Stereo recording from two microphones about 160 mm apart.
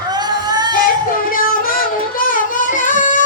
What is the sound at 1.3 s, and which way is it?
Music, 60° left (ahead or behind).